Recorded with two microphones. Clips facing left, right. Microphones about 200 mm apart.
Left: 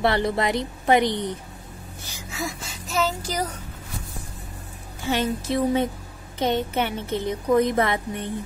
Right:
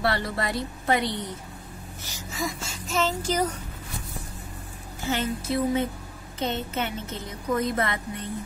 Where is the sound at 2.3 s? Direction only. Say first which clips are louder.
Even; centre (ahead or behind).